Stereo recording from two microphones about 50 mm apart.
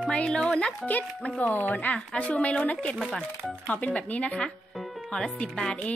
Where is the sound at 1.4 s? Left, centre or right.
Left.